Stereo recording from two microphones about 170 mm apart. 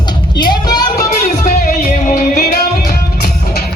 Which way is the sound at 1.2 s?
55° left (ahead or behind).